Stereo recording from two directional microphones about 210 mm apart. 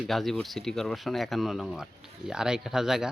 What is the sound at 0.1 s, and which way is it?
Speech, centre (ahead or behind).